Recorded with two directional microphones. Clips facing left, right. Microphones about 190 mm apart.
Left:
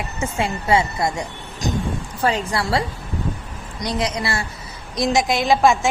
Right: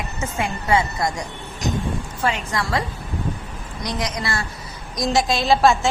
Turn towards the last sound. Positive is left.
turn(degrees=15)  # may be behind; listen again after turning